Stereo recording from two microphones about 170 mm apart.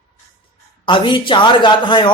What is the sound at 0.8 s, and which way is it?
A man's voice, 30° left (ahead or behind).